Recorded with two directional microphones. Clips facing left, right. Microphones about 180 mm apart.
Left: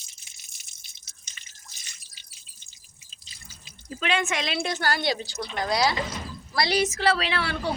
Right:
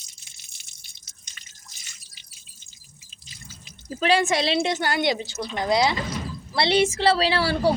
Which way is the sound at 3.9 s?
35° right (ahead or behind).